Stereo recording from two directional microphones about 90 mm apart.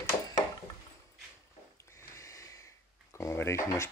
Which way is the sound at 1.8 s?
30° left (ahead or behind).